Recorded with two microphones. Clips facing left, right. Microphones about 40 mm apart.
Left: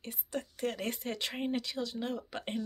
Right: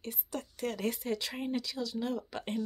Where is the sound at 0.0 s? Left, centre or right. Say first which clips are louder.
Left 1 dB; left.